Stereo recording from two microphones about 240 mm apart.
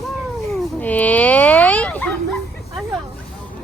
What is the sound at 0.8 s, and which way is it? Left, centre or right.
Speech, centre.